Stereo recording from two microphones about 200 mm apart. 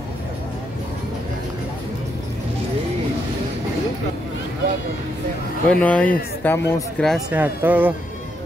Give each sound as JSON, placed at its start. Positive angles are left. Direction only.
{"t": 5.7, "sound": "speech", "side_deg": 5}